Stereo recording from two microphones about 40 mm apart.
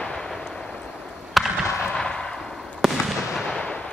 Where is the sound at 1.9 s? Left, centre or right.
Centre.